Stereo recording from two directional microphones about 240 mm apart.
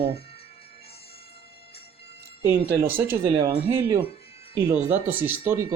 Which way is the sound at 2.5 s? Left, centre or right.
Centre.